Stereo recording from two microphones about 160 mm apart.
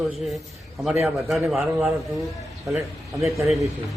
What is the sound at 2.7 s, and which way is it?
Speech, 20° right (ahead or behind).